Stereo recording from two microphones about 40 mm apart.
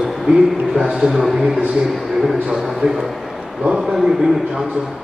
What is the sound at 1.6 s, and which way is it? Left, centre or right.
Speech, right.